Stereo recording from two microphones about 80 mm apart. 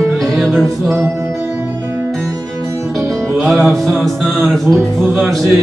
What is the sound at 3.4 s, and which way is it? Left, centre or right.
Music, centre.